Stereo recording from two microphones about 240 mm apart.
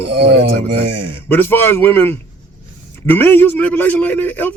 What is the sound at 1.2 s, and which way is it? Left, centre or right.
Speech, centre.